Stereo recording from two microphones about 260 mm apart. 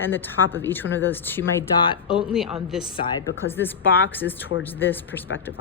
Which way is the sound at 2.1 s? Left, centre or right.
Centre.